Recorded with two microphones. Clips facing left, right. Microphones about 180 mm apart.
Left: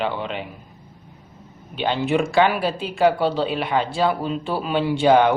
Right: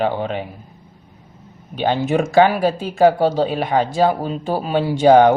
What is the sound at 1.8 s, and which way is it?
Speech, 45° right (ahead or behind).